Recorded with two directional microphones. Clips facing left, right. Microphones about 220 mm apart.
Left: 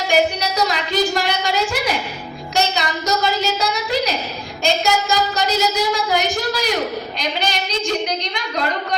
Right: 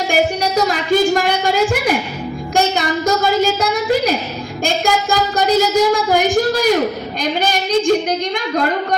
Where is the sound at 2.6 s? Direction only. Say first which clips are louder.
Right 4 dB; 50° right (ahead or behind).